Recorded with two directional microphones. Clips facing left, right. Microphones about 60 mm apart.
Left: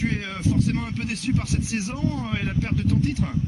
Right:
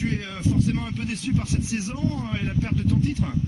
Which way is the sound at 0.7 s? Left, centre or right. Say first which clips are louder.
Even; left.